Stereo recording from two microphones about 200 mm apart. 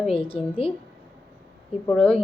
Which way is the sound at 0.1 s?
25° left (ahead or behind).